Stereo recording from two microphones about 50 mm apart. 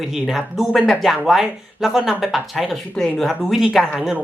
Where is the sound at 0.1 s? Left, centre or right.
Centre.